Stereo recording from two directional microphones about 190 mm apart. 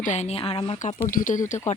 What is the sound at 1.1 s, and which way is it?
Speech, 45° left (ahead or behind).